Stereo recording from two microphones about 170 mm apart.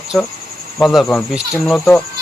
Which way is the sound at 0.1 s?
Centre (ahead or behind).